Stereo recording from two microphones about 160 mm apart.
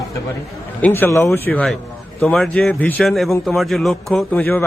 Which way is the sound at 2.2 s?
Centre (ahead or behind).